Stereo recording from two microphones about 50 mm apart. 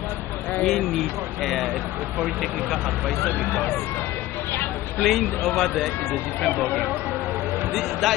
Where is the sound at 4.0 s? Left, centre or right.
Left.